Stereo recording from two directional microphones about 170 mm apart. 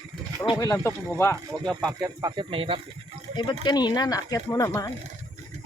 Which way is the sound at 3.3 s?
25° left (ahead or behind).